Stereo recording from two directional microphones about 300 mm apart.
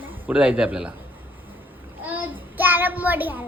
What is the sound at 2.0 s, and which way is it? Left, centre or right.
Child singing, centre.